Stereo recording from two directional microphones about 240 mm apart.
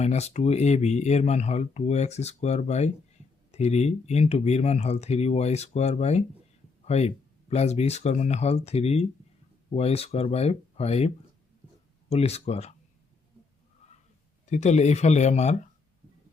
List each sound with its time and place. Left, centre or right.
0.0 s speech: left
14.5 s speech: left